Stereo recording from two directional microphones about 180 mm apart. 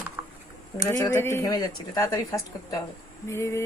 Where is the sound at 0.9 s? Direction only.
15° left (ahead or behind).